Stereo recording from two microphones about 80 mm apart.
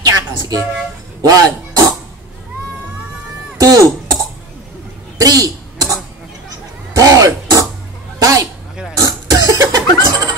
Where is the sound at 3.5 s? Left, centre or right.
Right.